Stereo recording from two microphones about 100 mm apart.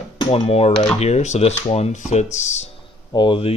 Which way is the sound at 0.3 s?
85° left.